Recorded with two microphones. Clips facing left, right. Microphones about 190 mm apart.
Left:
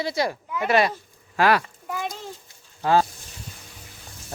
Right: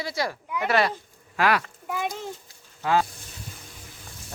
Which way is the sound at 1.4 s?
35° left (ahead or behind).